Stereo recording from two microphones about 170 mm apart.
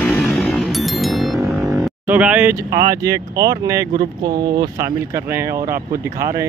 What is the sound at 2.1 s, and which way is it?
Speech, 5° right (ahead or behind).